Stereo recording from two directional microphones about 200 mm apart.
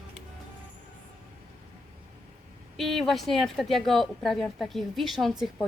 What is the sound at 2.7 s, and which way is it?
A woman's voice, centre (ahead or behind).